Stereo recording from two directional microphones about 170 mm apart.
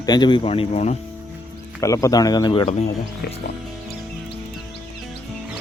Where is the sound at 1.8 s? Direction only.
20° left (ahead or behind).